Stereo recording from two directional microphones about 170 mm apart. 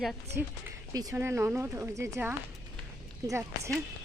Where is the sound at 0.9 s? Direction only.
20° right (ahead or behind).